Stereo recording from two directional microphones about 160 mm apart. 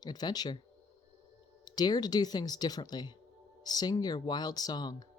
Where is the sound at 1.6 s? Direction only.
25° left (ahead or behind).